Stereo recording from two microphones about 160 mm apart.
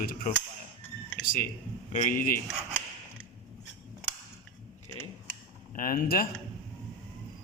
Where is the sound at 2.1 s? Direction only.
60° left (ahead or behind).